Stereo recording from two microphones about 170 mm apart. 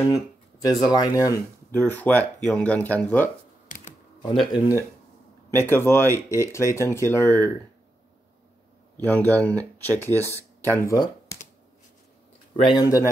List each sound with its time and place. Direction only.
0.9 s speech: 20° left (ahead or behind)
2.0 s speech: 10° left (ahead or behind)
4.3 s speech: 25° left (ahead or behind)
5.5 s speech: 15° left (ahead or behind)
8.9 s speech: 10° left (ahead or behind)
10.0 s speech: 15° right (ahead or behind)
10.7 s speech: 15° left (ahead or behind)
12.5 s speech: 25° left (ahead or behind)